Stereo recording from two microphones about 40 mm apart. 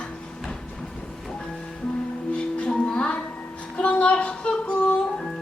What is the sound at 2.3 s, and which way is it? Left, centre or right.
Music, left.